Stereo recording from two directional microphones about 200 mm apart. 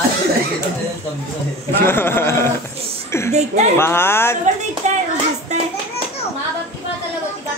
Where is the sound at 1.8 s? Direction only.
10° left (ahead or behind).